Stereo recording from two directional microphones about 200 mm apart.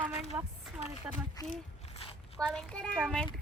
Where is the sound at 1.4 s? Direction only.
20° left (ahead or behind).